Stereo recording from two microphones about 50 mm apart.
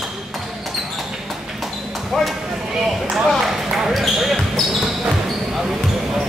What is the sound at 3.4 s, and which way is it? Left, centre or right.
Basketball bounce, centre.